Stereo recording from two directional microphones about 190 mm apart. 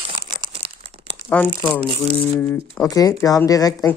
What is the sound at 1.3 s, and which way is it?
Speech, 10° left (ahead or behind).